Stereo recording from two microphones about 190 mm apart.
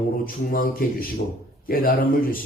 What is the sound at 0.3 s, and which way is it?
Speech, 50° left (ahead or behind).